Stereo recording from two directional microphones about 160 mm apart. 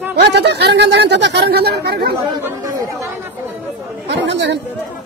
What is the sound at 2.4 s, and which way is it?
Speech, 20° right (ahead or behind).